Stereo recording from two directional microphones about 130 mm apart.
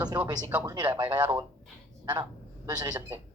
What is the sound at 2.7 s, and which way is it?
Speech, 30° right (ahead or behind).